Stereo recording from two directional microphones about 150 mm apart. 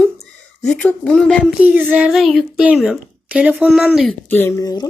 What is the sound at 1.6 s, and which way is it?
A child's voice, 10° right (ahead or behind).